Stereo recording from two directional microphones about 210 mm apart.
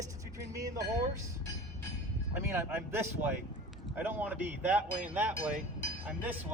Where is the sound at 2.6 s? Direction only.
10° right (ahead or behind).